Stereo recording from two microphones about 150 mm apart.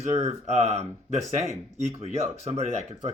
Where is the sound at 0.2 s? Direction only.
45° right (ahead or behind).